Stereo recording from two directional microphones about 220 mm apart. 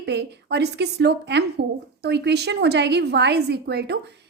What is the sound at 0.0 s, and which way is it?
A woman's voice, 50° right (ahead or behind).